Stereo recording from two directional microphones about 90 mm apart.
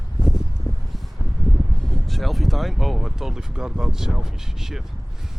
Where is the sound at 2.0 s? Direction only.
Centre (ahead or behind).